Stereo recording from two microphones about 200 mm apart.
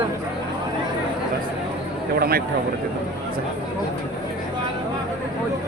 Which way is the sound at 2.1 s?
50° right (ahead or behind).